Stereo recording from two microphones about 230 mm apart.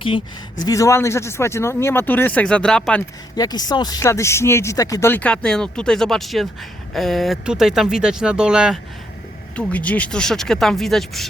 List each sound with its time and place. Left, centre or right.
0.0 s speech: centre
3.3 s speech: centre